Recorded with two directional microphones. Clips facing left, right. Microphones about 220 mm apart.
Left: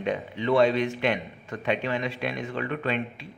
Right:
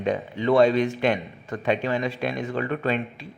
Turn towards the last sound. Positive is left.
turn(degrees=-40)  # may be behind; listen again after turning